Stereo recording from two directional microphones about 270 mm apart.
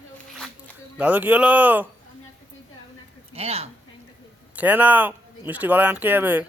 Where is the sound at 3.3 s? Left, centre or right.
Right.